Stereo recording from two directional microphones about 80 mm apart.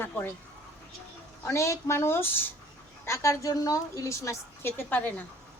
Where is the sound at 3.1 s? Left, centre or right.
Left.